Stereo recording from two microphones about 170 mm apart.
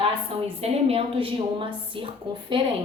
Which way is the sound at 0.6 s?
35° right (ahead or behind).